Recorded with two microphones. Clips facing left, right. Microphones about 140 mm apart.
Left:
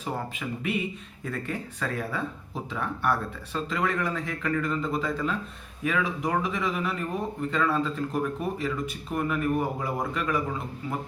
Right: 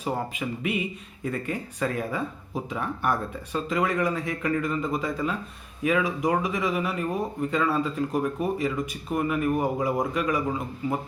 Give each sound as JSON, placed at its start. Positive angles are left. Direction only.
{"t": 0.0, "sound": "speech", "side_deg": -15}